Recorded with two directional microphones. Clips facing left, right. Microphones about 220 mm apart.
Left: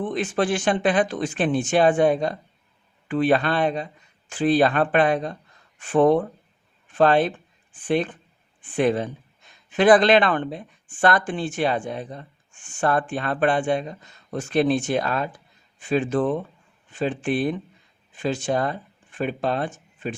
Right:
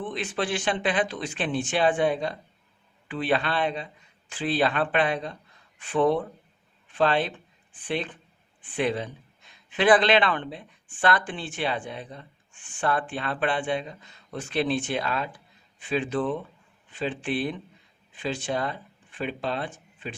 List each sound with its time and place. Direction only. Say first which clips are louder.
0.0 s speech: left 6 dB; 45° left (ahead or behind)